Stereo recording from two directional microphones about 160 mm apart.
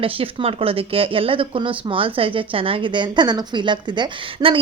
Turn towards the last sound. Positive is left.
turn(degrees=-30)  # may be behind; listen again after turning